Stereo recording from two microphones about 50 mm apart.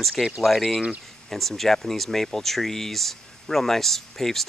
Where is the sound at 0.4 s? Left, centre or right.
Centre.